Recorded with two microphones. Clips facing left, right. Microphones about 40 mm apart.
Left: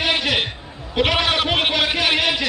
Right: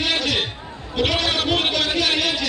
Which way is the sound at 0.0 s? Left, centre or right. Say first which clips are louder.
Left 2 dB; centre.